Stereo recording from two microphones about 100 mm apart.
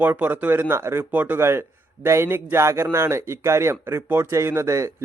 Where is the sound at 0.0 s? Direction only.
20° right (ahead or behind).